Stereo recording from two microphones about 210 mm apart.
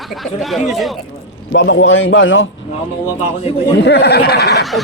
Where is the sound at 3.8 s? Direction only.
50° left (ahead or behind).